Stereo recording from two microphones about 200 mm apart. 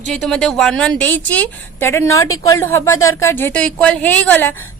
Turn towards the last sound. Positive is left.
turn(degrees=10)  # may be behind; listen again after turning